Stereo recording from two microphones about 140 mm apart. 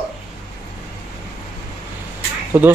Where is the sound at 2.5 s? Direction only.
15° right (ahead or behind).